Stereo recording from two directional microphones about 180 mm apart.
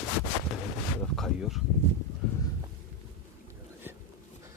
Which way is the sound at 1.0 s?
Centre (ahead or behind).